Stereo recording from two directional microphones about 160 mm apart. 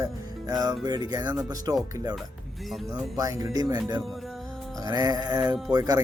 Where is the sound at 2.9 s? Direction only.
20° right (ahead or behind).